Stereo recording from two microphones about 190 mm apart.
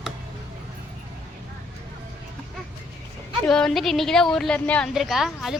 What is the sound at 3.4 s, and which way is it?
A woman's voice, 5° left (ahead or behind).